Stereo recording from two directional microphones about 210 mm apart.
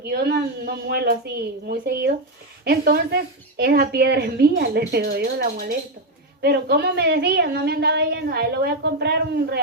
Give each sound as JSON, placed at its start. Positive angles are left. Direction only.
{"t": 0.0, "sound": "a woman's voice", "side_deg": -50}